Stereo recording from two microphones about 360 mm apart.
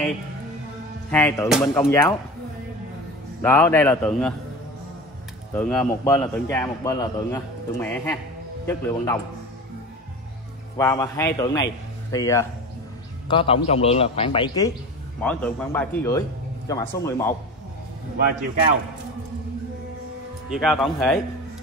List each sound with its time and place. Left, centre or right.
1.1 s a man's voice: centre
3.4 s speech: centre
5.5 s a man's voice: centre
10.8 s a man's voice: centre
20.4 s speech: centre